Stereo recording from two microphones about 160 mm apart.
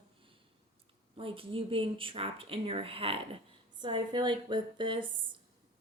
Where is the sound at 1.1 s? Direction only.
35° right (ahead or behind).